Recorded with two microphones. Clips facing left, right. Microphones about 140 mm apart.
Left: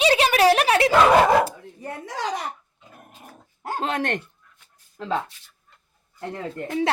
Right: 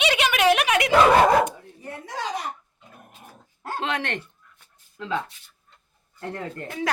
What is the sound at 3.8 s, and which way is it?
Speech, 45° left (ahead or behind).